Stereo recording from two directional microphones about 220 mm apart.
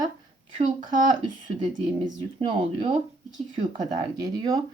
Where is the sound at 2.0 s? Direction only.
20° right (ahead or behind).